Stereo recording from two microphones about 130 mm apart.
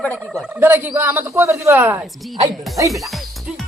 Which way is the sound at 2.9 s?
Centre (ahead or behind).